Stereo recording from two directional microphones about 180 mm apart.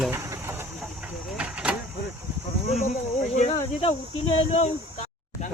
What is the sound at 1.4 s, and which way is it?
Vehicle, 5° right (ahead or behind).